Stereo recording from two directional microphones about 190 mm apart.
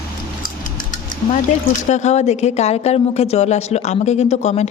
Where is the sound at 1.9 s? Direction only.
35° left (ahead or behind).